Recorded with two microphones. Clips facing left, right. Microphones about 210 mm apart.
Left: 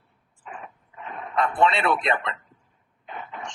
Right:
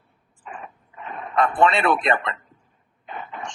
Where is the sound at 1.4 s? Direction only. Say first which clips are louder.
Right 3 dB; 50° right (ahead or behind).